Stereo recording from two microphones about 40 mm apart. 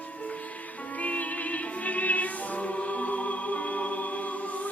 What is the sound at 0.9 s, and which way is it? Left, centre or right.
Music, left.